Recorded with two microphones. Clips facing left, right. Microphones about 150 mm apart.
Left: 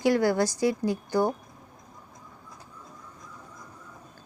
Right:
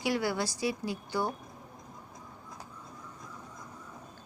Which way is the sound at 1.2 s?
20° left (ahead or behind).